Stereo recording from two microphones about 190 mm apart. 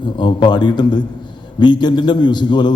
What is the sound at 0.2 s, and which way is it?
A man's voice, 25° left (ahead or behind).